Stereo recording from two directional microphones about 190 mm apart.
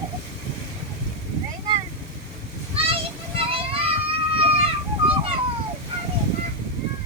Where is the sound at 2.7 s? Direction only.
30° right (ahead or behind).